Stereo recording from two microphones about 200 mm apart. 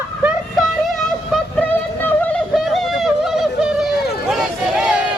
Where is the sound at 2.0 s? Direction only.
5° left (ahead or behind).